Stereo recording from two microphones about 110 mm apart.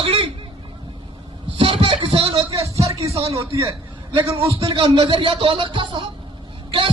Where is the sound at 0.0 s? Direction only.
60° right (ahead or behind).